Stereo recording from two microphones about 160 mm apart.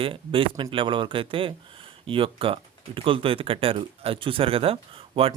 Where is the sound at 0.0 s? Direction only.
35° right (ahead or behind).